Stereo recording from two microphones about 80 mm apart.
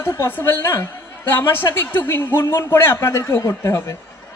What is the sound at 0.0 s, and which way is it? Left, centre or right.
A woman's voice, left.